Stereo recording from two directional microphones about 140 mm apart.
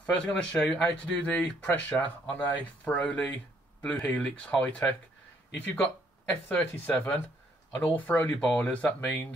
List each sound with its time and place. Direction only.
0.0 s speech: 10° left (ahead or behind)